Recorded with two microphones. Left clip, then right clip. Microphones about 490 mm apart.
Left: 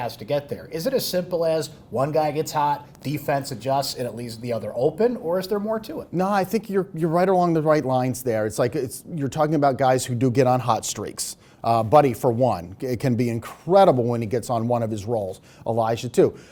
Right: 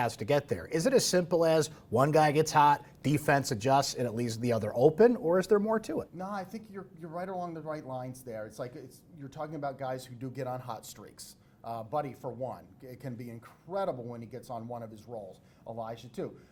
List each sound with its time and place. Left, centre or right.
0.0 s speech: right
6.1 s speech: left